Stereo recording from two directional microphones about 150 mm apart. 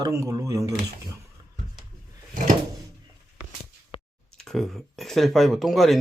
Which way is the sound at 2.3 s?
60° right (ahead or behind).